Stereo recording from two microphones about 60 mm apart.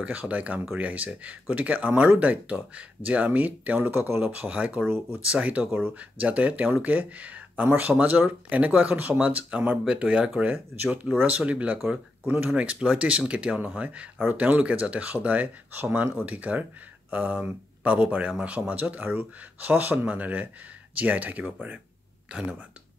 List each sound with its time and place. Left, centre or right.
0.0 s speech: right
4.2 s speech: right
12.5 s speech: right